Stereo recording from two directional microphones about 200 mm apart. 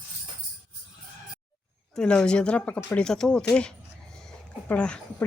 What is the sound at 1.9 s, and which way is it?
A woman's voice, 5° left (ahead or behind).